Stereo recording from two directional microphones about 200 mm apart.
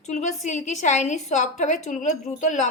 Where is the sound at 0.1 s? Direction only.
35° left (ahead or behind).